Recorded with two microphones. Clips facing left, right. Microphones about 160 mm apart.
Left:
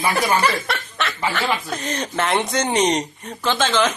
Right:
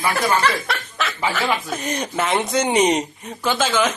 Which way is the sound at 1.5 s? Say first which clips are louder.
Right 1 dB; 10° right (ahead or behind).